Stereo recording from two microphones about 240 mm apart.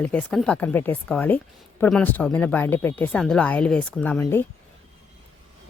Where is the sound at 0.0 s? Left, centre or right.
Centre.